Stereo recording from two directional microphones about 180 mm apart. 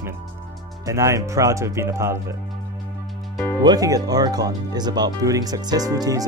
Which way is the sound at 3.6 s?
20° right (ahead or behind).